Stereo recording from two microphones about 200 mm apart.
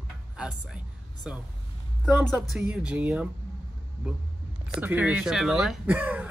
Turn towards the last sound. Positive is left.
turn(degrees=-5)  # may be behind; listen again after turning